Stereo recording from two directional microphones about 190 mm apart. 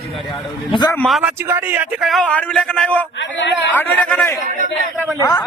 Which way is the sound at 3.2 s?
70° left (ahead or behind).